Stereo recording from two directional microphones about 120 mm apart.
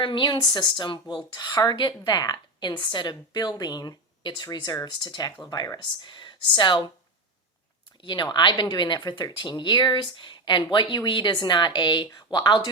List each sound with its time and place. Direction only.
0.0 s a woman's voice: 40° left (ahead or behind)
8.0 s speech: 40° left (ahead or behind)